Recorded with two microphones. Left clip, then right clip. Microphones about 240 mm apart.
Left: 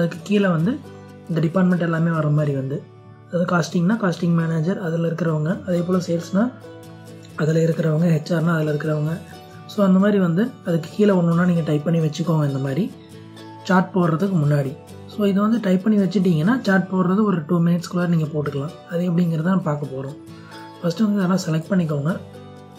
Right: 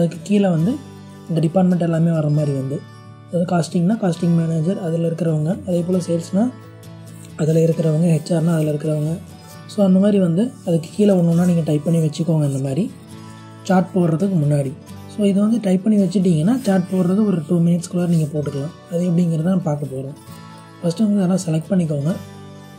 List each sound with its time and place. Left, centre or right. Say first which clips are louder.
0.0 s speech: right 2 dB; centre
8.8 s speech: right 2 dB; centre
9.8 s speech: right 2 dB; centre
20.8 s speech: right 2 dB; centre